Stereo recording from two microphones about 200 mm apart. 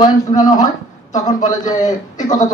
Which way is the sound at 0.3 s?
40° left (ahead or behind).